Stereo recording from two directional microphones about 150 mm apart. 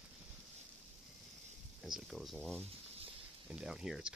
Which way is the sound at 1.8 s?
Centre (ahead or behind).